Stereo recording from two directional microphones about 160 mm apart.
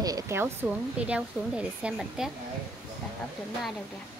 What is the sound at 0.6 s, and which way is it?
Speech, 5° right (ahead or behind).